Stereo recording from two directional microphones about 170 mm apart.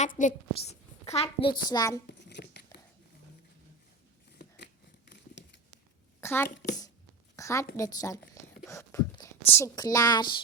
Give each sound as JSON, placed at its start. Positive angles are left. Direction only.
{"t": 0.0, "sound": "a child's voice", "side_deg": 45}
{"t": 2.0, "sound": "tearing", "side_deg": 90}
{"t": 4.4, "sound": "scissors", "side_deg": 85}
{"t": 6.1, "sound": "a sound", "side_deg": 15}
{"t": 7.8, "sound": "speech", "side_deg": 20}